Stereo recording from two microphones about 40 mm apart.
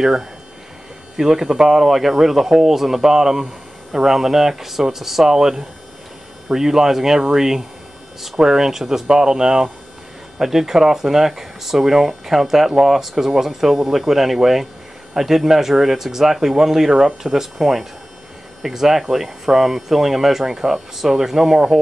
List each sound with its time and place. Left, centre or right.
0.0 s speech: centre